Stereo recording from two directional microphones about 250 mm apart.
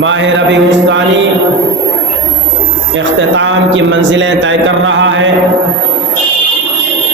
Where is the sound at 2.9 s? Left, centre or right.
Right.